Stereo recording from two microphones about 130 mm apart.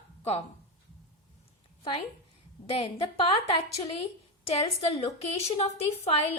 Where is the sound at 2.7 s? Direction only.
45° left (ahead or behind).